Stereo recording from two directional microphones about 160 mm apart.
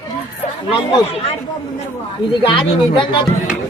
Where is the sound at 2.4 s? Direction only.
30° left (ahead or behind).